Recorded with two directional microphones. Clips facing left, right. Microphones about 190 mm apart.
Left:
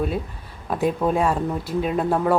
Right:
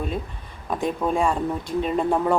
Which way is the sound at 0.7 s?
5° left (ahead or behind).